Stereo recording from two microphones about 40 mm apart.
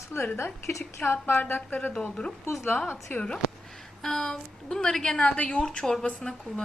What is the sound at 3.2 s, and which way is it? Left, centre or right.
A woman's voice, centre.